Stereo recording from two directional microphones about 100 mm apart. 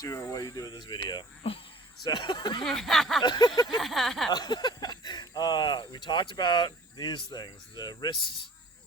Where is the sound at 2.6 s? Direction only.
5° left (ahead or behind).